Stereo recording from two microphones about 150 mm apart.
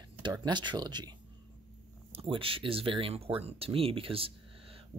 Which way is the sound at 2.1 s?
40° right (ahead or behind).